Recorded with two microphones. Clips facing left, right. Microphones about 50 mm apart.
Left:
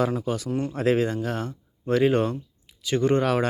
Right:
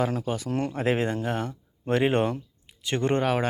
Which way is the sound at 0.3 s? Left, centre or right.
Right.